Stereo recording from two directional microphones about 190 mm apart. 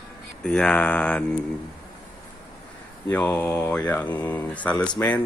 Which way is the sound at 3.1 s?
10° left (ahead or behind).